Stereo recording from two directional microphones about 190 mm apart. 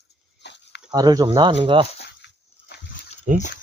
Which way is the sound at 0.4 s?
65° left (ahead or behind).